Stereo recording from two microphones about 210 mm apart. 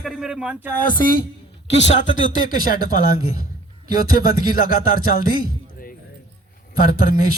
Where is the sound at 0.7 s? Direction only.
40° left (ahead or behind).